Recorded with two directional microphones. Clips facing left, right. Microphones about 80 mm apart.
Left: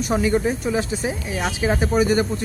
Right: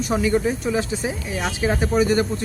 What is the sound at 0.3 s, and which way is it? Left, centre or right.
Speech, centre.